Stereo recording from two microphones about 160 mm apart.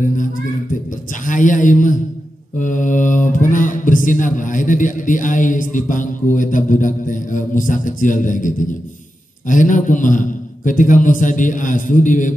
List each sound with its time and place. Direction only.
1.2 s mantra: 55° left (ahead or behind)